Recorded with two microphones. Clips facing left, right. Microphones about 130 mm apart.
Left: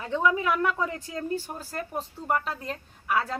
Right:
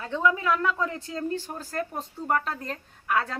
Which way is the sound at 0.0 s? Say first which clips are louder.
Even; 15° left (ahead or behind).